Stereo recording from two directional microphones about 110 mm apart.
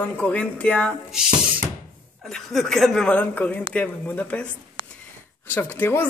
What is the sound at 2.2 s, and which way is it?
Speech, 5° left (ahead or behind).